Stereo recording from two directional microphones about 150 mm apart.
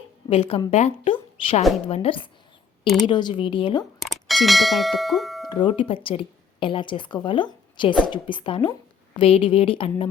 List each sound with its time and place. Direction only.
0.3 s a woman's voice: 40° left (ahead or behind)
1.1 s a sound: 35° left (ahead or behind)
1.9 s a woman's voice: 40° left (ahead or behind)
2.8 s a woman's voice: centre (ahead or behind)
3.1 s a woman's voice: 30° left (ahead or behind)
4.0 s speech: centre (ahead or behind)
5.5 s a woman's voice: 30° left (ahead or behind)